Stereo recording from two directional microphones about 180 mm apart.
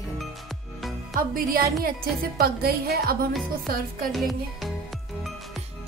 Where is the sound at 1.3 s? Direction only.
55° right (ahead or behind).